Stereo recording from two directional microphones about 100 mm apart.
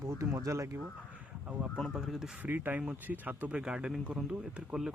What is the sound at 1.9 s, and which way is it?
Speech, 5° right (ahead or behind).